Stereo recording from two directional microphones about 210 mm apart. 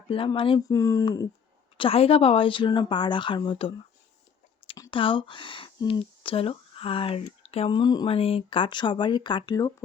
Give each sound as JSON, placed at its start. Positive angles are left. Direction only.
{"t": 0.1, "sound": "speech", "side_deg": 25}
{"t": 4.7, "sound": "speech", "side_deg": 25}